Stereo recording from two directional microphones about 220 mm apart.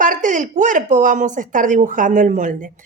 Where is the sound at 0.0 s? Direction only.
35° right (ahead or behind).